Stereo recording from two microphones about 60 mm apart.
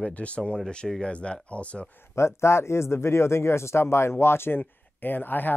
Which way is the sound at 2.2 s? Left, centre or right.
Left.